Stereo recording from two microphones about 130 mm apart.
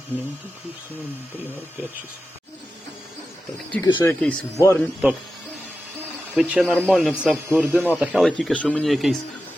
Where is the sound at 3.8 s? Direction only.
30° left (ahead or behind).